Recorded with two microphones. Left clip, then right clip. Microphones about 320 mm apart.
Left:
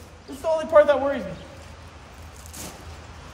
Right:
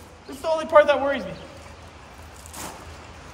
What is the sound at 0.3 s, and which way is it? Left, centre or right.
Speech, right.